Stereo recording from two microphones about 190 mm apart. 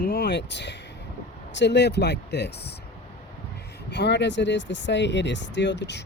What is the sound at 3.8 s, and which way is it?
Speech, 65° left (ahead or behind).